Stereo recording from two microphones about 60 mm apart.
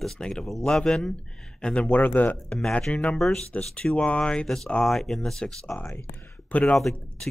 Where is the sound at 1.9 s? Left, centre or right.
Left.